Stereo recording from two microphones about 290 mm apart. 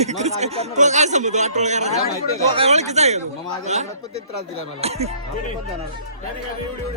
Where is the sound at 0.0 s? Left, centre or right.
Right.